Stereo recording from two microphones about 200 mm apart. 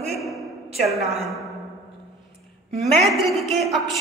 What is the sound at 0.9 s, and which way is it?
Speech, 30° right (ahead or behind).